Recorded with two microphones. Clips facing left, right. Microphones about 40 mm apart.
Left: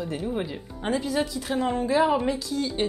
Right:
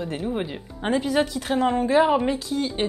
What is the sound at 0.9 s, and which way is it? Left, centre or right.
A woman's voice, right.